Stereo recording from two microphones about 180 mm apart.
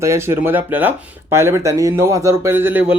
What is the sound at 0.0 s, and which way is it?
A man's voice, 15° right (ahead or behind).